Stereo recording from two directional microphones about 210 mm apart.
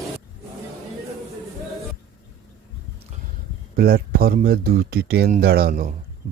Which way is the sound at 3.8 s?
45° right (ahead or behind).